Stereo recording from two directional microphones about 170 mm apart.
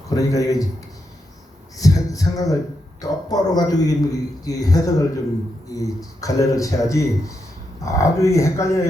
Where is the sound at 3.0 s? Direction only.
20° left (ahead or behind).